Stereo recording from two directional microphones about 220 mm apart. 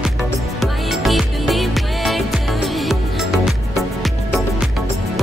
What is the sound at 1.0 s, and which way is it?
Music, centre (ahead or behind).